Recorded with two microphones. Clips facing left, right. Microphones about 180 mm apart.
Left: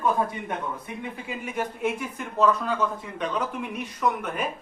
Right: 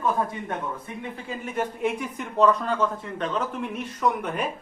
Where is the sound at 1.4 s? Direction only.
5° left (ahead or behind).